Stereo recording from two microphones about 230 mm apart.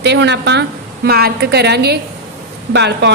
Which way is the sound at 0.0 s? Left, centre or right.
Right.